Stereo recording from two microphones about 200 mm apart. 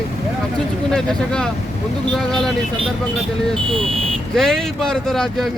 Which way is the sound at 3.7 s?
30° right (ahead or behind).